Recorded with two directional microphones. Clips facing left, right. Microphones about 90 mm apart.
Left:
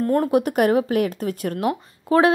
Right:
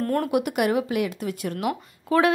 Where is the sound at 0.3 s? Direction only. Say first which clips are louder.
Left 4 dB; 35° left (ahead or behind).